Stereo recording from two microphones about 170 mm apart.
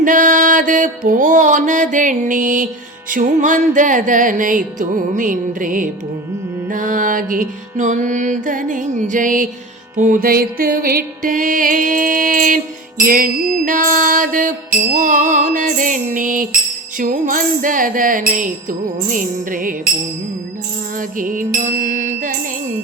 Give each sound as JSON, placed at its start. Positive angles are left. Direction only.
{"t": 0.0, "sound": "music", "side_deg": -50}
{"t": 21.2, "sound": "music", "side_deg": -50}